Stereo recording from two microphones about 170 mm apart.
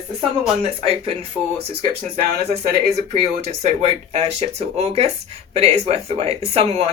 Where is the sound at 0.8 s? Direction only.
35° right (ahead or behind).